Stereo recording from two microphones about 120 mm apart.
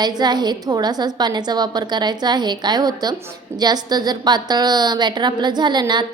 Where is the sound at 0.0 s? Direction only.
35° right (ahead or behind).